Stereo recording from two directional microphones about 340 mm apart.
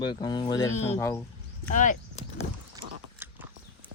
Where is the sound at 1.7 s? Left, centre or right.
Left.